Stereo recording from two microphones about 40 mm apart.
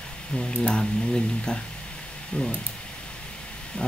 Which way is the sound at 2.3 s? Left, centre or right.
Left.